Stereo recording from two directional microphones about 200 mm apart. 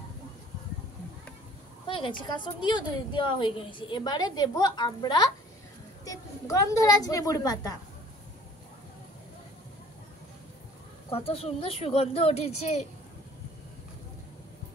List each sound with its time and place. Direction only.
1.9 s a woman's voice: 25° left (ahead or behind)
11.1 s speech: 30° left (ahead or behind)